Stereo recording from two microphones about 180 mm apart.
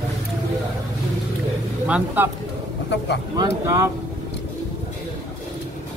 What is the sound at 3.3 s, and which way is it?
Speech, 20° right (ahead or behind).